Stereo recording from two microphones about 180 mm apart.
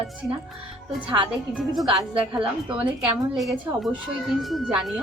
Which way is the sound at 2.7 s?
25° right (ahead or behind).